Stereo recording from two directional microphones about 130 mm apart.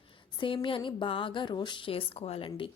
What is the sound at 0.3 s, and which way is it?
Speech, 40° left (ahead or behind).